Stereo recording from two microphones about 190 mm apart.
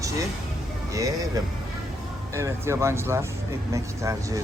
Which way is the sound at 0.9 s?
20° right (ahead or behind).